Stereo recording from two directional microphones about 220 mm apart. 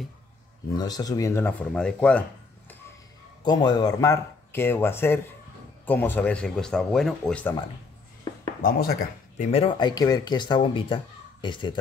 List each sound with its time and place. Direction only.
0.7 s speech: 15° left (ahead or behind)
3.4 s speech: 20° left (ahead or behind)
8.6 s speech: 40° left (ahead or behind)
9.5 s speech: 25° left (ahead or behind)